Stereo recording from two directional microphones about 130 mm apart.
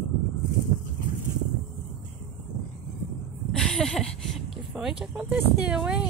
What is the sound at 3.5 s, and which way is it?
Speech, 5° left (ahead or behind).